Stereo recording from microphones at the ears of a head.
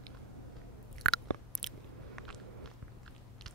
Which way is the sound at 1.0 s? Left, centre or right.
Right.